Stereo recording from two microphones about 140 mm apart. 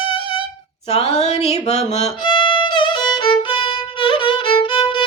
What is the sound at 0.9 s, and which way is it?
Mantra, 45° left (ahead or behind).